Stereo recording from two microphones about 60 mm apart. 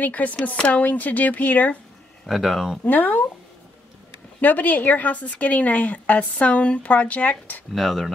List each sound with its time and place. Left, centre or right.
0.0 s a woman's voice: left
2.2 s speech: centre
2.8 s a woman's voice: left
4.4 s a woman's voice: left
7.7 s speech: centre